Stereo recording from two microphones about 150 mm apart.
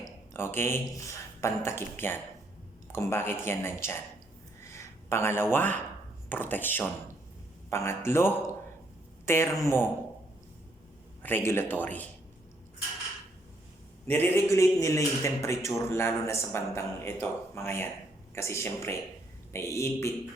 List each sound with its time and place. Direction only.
0.3 s a man's voice: 15° left (ahead or behind)
11.2 s a man's voice: 15° left (ahead or behind)
14.1 s a man's voice: 15° left (ahead or behind)